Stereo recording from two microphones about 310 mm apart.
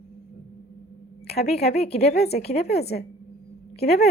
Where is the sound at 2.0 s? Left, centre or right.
Left.